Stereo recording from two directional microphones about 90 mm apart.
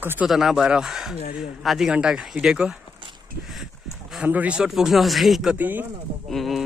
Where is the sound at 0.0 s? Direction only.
25° right (ahead or behind).